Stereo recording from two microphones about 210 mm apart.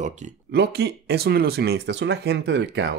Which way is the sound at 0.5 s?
50° right (ahead or behind).